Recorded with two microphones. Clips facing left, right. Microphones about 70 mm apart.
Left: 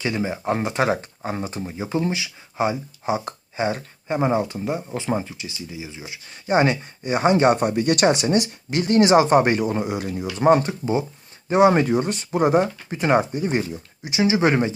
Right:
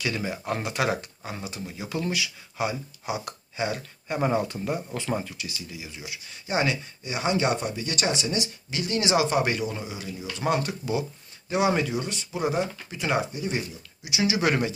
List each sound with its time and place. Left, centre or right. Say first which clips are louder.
0.0 s speech: left 5 dB; left
6.5 s speech: left 7 dB; left
10.3 s speech: left 9 dB; left
14.2 s speech: left 6 dB; left